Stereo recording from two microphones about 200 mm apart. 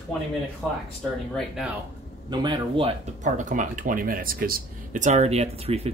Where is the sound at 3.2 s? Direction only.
40° right (ahead or behind).